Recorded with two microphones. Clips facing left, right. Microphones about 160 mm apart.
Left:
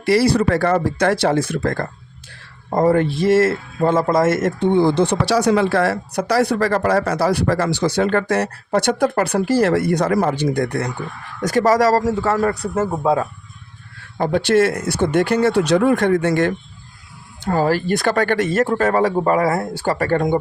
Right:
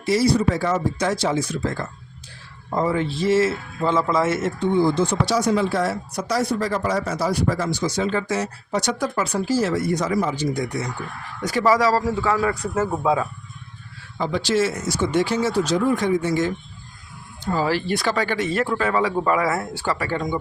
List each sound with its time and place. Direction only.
0.0 s speech: 65° left (ahead or behind); by 4.4 s 50° left (ahead or behind)
4.4 s speech: 60° left (ahead or behind)
11.3 s speech: 45° left (ahead or behind)
14.2 s speech: 55° left (ahead or behind)
17.5 s speech: 45° left (ahead or behind)